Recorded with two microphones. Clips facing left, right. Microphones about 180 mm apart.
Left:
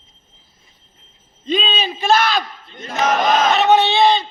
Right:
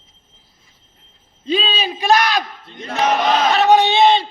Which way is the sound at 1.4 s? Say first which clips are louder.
Even; 5° right (ahead or behind).